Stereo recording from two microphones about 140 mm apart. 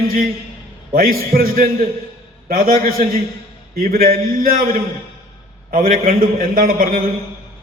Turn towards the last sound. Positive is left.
turn(degrees=-90)